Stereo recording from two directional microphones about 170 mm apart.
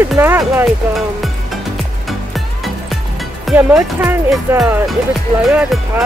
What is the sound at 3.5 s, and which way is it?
Speech, 10° right (ahead or behind).